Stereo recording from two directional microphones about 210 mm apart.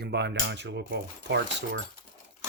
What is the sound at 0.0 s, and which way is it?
Speech, 55° right (ahead or behind).